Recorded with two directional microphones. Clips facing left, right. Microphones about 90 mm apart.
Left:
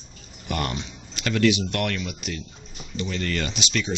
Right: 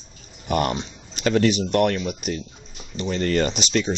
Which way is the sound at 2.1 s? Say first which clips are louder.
Right 6 dB; 45° right (ahead or behind).